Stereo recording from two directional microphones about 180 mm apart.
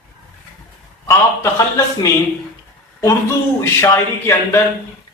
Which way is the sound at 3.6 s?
15° left (ahead or behind).